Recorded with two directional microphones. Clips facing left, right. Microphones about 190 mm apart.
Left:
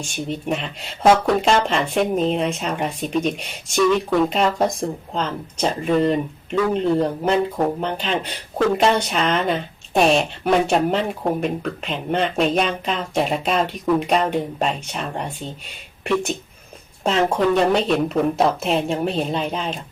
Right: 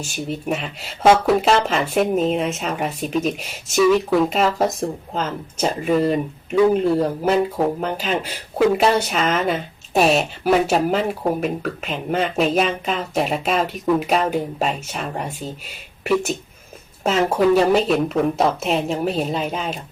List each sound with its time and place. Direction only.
0.0 s speech: 5° right (ahead or behind)